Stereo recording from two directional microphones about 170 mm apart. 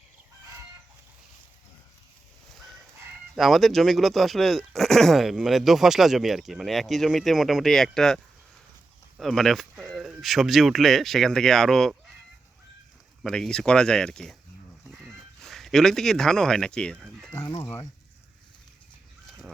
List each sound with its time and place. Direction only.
3.3 s speech: centre (ahead or behind)
13.2 s speech: 5° left (ahead or behind)
14.8 s a sound: centre (ahead or behind)
17.3 s speech: 15° left (ahead or behind)